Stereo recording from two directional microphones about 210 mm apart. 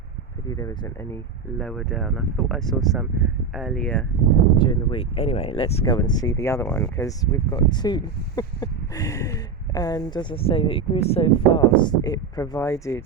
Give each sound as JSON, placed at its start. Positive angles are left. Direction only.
{"t": 0.4, "sound": "speech", "side_deg": 15}
{"t": 1.1, "sound": "speech", "side_deg": 5}
{"t": 4.5, "sound": "speech", "side_deg": 25}